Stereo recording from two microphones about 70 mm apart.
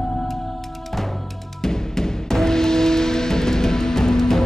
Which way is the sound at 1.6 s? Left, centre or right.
Centre.